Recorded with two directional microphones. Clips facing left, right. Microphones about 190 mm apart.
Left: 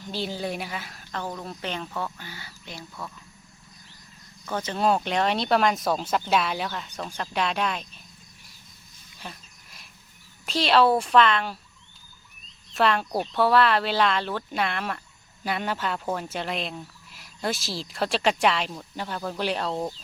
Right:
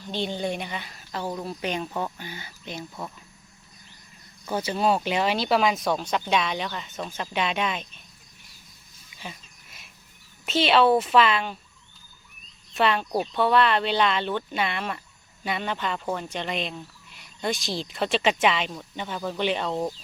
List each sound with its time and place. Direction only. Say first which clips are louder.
0.1 s speech: right 2 dB; 5° left (ahead or behind)
1.1 s speech: right 3 dB; 10° right (ahead or behind)
4.4 s speech: right 1 dB; 10° right (ahead or behind)
9.2 s a sound: right 1 dB; centre (ahead or behind)
10.4 s speech: right 1 dB; centre (ahead or behind)
12.7 s speech: even; centre (ahead or behind)